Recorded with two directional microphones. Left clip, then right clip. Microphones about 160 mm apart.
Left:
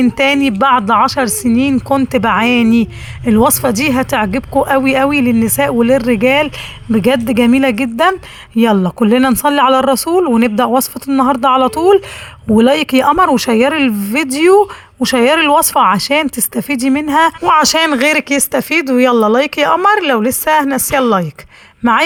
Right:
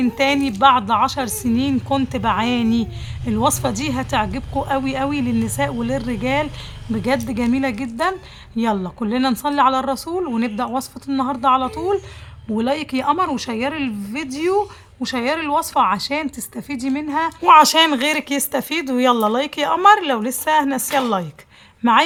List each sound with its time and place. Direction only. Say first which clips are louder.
0.2 s speech: left 2 dB; 40° left (ahead or behind)
17.4 s speech: left 1 dB; 25° left (ahead or behind)